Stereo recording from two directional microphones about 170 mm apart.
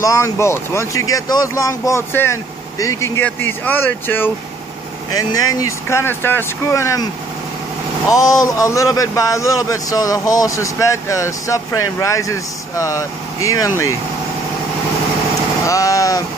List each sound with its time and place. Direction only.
0.0 s speech: 15° left (ahead or behind)
8.1 s a man's voice: 20° left (ahead or behind)
15.6 s a man's voice: 20° left (ahead or behind)